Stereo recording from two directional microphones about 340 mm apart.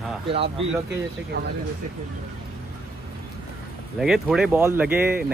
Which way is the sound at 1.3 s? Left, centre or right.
Right.